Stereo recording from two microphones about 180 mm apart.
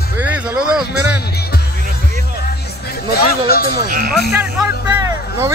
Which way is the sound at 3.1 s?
55° left (ahead or behind).